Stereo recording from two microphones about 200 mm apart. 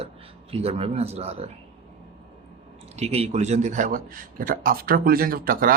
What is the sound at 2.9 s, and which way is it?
A man's voice, 30° right (ahead or behind).